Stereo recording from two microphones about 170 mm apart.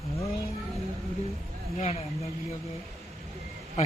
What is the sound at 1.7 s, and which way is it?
Speech, 35° left (ahead or behind).